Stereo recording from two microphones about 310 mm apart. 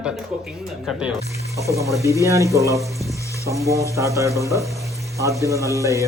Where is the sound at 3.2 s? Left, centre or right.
Centre.